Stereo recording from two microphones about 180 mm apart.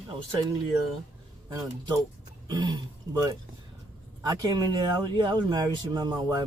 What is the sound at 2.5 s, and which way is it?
Speech, 25° right (ahead or behind).